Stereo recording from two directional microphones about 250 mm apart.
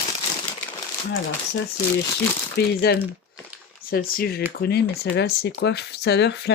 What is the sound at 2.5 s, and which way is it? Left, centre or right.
Speech, left.